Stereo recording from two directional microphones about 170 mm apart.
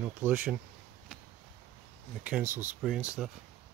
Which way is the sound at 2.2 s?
10° right (ahead or behind).